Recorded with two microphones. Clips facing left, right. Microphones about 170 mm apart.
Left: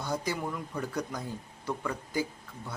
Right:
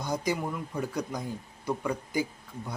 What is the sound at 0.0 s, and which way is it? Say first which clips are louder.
Speech: right 2 dB; 15° right (ahead or behind).